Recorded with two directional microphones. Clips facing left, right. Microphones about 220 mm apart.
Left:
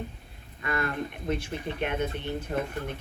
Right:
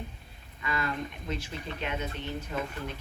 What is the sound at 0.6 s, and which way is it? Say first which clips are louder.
Speech: left 3 dB; 55° left (ahead or behind).